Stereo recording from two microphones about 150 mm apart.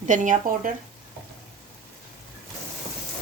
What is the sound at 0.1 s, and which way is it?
Speech, 60° right (ahead or behind).